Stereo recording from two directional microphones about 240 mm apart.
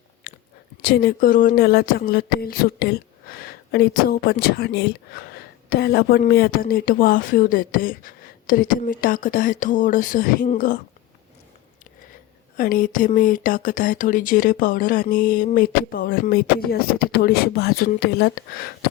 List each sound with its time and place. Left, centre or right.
0.8 s speech: left
12.5 s speech: left